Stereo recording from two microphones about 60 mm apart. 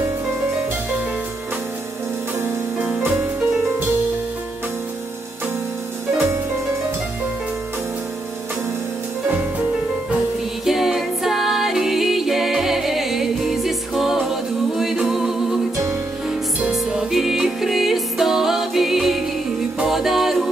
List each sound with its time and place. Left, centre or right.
3.0 s music: right
10.6 s music: centre
16.7 s music: centre